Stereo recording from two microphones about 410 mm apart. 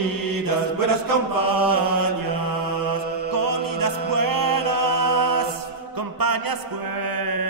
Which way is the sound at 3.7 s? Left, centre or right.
Right.